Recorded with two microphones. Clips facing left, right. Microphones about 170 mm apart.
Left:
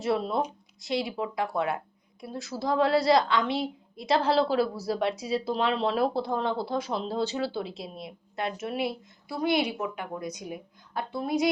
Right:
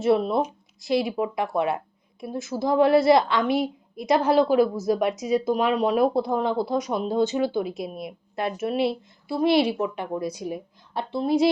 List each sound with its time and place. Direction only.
0.0 s a woman's voice: 25° right (ahead or behind)
7.6 s a woman's voice: 30° left (ahead or behind)
7.9 s a woman's voice: 20° right (ahead or behind)